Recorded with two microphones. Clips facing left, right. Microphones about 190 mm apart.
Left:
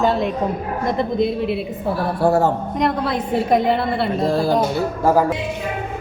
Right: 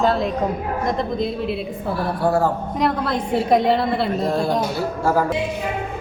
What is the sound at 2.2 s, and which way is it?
Speech, 25° left (ahead or behind).